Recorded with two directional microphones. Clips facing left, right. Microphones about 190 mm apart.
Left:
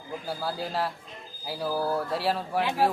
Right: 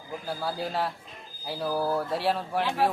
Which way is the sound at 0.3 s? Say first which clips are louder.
Right 1 dB; centre (ahead or behind).